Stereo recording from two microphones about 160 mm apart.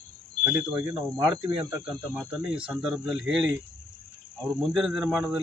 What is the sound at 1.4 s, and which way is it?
Speech, 30° right (ahead or behind).